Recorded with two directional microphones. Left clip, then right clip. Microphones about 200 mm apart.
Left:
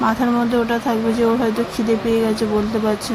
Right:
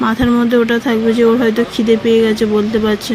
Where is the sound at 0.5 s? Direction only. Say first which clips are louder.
Right 5 dB; 20° right (ahead or behind).